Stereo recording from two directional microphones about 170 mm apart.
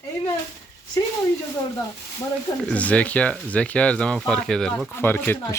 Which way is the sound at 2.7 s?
5° left (ahead or behind).